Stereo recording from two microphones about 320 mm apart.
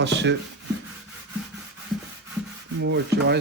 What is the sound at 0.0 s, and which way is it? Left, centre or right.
Rub, right.